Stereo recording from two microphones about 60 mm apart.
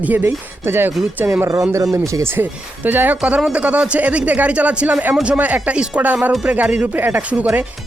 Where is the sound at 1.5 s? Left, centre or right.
Right.